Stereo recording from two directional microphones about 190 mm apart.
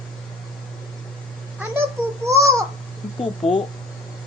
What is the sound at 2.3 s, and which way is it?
Babbling, 15° right (ahead or behind).